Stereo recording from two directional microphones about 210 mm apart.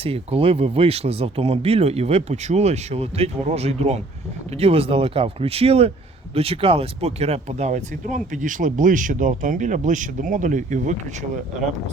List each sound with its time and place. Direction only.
0.0 s speech: 25° right (ahead or behind)